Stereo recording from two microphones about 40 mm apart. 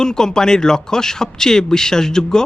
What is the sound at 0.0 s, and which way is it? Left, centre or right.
Speech, centre.